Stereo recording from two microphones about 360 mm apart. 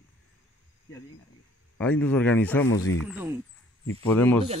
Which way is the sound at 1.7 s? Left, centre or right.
Centre.